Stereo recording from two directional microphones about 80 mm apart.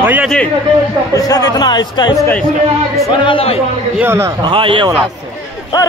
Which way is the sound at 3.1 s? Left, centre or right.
Left.